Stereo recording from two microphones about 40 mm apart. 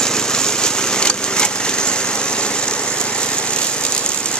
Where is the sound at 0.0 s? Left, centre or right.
Centre.